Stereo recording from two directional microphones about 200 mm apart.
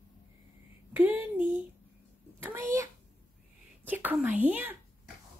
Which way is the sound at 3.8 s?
10° right (ahead or behind).